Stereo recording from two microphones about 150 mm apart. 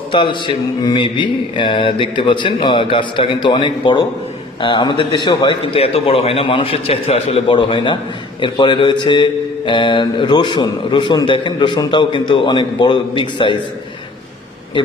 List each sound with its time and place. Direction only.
0.1 s a man's voice: 35° left (ahead or behind)